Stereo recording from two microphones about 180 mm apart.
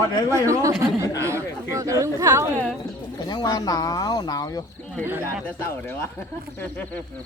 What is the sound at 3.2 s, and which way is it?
Speech, 25° left (ahead or behind).